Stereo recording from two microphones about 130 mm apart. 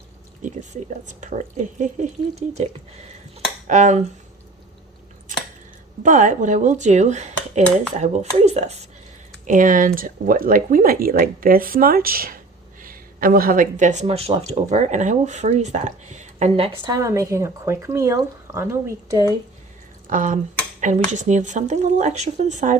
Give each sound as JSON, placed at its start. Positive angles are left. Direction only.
{"t": 1.0, "sound": "speech", "side_deg": -65}
{"t": 3.7, "sound": "speech", "side_deg": -65}
{"t": 6.0, "sound": "speech", "side_deg": -80}
{"t": 9.5, "sound": "speech", "side_deg": -85}
{"t": 16.6, "sound": "a woman's voice", "side_deg": -45}
{"t": 16.9, "sound": "speech", "side_deg": -25}
{"t": 20.1, "sound": "speech", "side_deg": -90}
{"t": 20.8, "sound": "speech", "side_deg": -65}